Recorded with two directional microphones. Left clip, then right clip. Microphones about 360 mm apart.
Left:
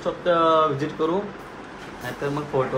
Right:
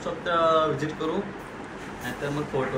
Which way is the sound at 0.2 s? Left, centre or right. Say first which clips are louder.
Left 3 dB; left.